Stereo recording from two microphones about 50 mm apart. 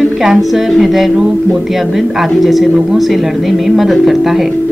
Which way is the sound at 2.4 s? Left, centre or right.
Centre.